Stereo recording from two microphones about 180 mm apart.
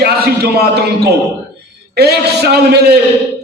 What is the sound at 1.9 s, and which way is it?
A man's voice, 65° right (ahead or behind).